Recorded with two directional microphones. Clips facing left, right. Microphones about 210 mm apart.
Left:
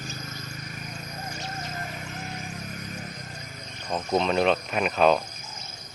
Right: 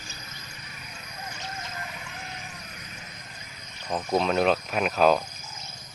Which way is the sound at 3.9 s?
5° right (ahead or behind).